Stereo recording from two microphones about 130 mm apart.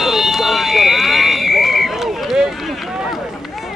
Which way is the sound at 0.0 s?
Centre (ahead or behind).